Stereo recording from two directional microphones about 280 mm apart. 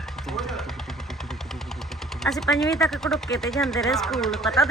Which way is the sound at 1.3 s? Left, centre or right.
Centre.